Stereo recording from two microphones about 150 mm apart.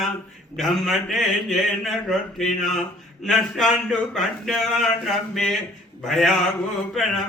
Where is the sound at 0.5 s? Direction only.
Centre (ahead or behind).